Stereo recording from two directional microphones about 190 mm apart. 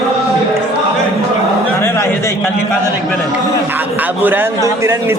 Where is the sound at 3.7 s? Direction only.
10° right (ahead or behind).